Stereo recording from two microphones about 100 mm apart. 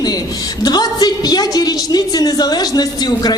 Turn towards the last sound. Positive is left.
turn(degrees=40)  # may be behind; listen again after turning